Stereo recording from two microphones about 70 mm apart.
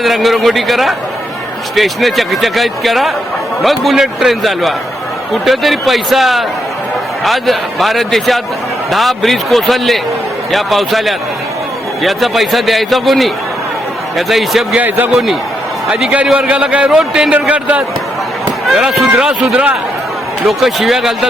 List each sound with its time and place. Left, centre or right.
0.0 s speech: centre
14.8 s a man's voice: right
15.9 s a man's voice: centre
18.4 s run: centre
19.2 s a man's voice: centre